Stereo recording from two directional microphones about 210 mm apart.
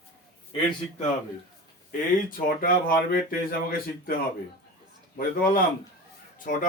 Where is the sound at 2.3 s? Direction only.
45° left (ahead or behind).